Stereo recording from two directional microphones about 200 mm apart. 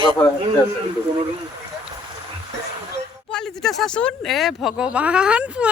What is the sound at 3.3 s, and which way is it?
Speech, centre (ahead or behind).